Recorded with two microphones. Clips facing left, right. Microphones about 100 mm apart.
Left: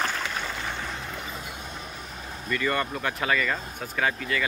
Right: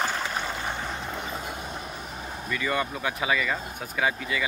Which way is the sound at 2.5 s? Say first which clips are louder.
Left 1 dB; 5° right (ahead or behind).